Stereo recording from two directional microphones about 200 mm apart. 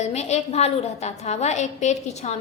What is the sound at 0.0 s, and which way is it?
A woman's voice, 35° left (ahead or behind).